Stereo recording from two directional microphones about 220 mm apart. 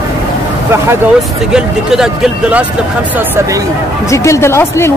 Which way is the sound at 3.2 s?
15° right (ahead or behind).